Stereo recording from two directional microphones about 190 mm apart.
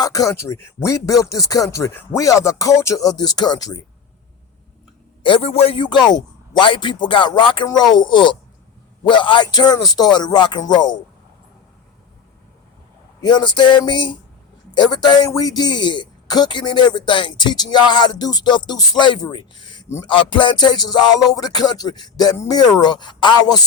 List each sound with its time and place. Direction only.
0.0 s speech: 20° left (ahead or behind)
5.2 s a man's voice: 30° left (ahead or behind)
13.2 s a man's voice: 25° left (ahead or behind)